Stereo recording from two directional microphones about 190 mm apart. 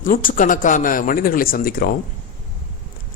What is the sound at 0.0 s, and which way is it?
A man's voice, 45° left (ahead or behind).